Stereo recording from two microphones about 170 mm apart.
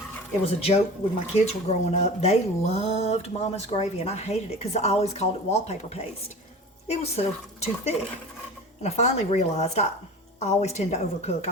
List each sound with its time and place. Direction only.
0.4 s speech: 35° left (ahead or behind)